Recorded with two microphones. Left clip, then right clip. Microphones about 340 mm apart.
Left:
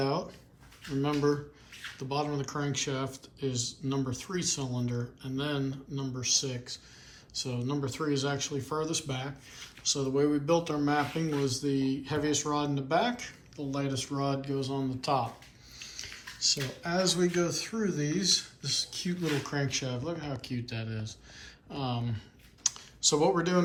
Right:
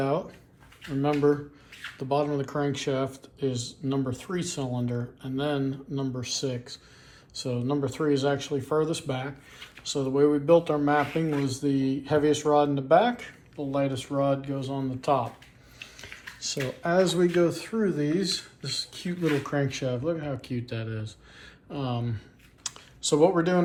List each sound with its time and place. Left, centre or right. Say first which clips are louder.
0.0 s speech: right 4 dB; centre
22.6 s computer keyboard: left 4 dB; centre